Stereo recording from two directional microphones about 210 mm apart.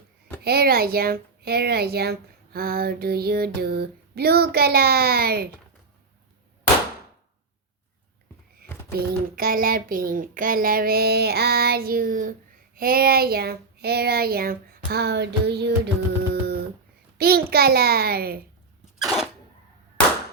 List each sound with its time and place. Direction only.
0.4 s speech: 50° right (ahead or behind)
8.9 s speech: 45° right (ahead or behind)
16.3 s a sound: 50° right (ahead or behind)
17.2 s speech: 45° right (ahead or behind)